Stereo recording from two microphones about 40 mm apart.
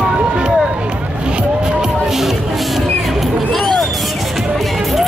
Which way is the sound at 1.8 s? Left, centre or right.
Centre.